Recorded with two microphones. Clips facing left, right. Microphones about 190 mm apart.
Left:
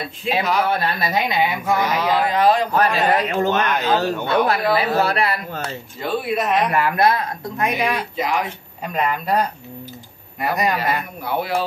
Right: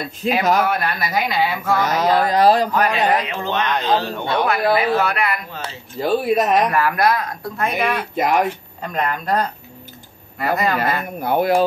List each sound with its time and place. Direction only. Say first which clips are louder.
0.4 s speech: right 3 dB; 45° right (ahead or behind)
0.7 s speech: left 1 dB; 30° left (ahead or behind)
1.9 s speech: right 2 dB; 40° right (ahead or behind)
2.7 s a man's voice: even; 40° left (ahead or behind)
5.9 s speech: right 5 dB; 40° right (ahead or behind)
6.7 s speech: even; 25° left (ahead or behind)
8.2 s speech: right 6 dB; 55° right (ahead or behind)
8.8 s speech: even; 10° left (ahead or behind)
10.8 s speech: right 2 dB; 50° right (ahead or behind)